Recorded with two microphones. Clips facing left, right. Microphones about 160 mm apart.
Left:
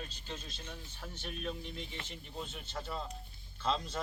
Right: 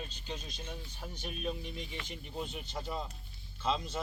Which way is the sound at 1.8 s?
30° left (ahead or behind).